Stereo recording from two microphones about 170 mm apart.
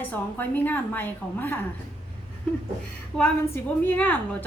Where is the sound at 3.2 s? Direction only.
10° left (ahead or behind).